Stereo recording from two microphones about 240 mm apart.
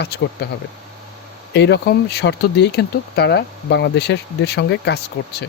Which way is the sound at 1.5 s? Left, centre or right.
Left.